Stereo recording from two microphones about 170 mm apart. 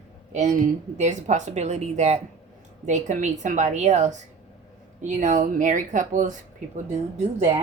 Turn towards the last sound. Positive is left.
turn(degrees=-40)  # may be behind; listen again after turning